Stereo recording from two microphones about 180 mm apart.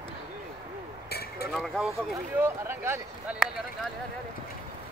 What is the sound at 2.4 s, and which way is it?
Speech, 15° right (ahead or behind).